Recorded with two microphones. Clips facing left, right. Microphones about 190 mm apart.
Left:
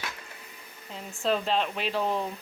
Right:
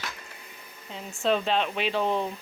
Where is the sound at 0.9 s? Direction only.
Centre (ahead or behind).